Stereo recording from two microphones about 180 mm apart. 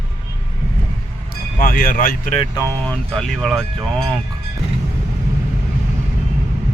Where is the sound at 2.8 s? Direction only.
Centre (ahead or behind).